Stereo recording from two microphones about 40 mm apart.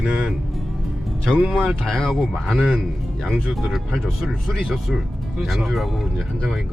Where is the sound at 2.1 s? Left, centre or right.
Centre.